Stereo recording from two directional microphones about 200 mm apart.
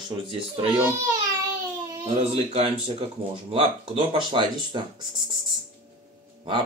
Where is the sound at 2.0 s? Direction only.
30° right (ahead or behind).